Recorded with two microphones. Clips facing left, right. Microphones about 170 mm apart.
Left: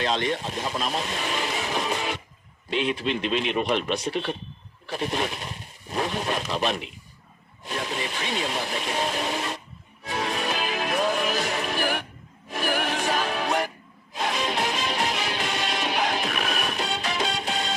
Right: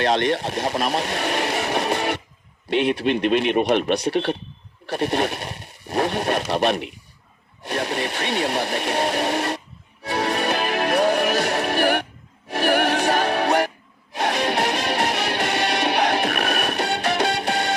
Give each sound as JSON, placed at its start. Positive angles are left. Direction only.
{"t": 0.0, "sound": "vehicle", "side_deg": -70}
{"t": 2.6, "sound": "speech", "side_deg": -65}
{"t": 10.0, "sound": "music", "side_deg": -70}